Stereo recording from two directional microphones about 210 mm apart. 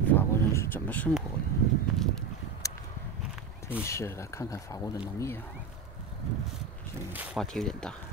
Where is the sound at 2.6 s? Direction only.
15° left (ahead or behind).